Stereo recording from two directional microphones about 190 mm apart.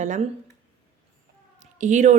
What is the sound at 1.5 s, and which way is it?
Cat, 40° right (ahead or behind).